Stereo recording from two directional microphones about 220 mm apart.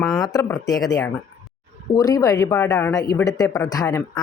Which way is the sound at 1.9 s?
15° left (ahead or behind).